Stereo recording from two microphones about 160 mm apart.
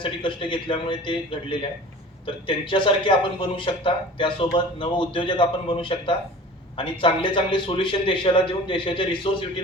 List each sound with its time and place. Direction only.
0.0 s a man's voice: 30° left (ahead or behind)